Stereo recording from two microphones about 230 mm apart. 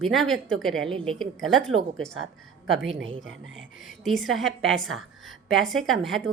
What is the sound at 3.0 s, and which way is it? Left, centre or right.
Speech, right.